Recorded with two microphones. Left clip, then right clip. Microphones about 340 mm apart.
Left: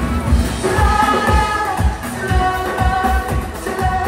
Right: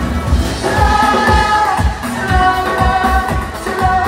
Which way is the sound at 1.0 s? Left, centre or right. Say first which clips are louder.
Right 3 dB; right.